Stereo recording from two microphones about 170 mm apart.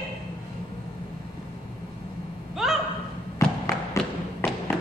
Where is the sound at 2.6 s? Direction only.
Centre (ahead or behind).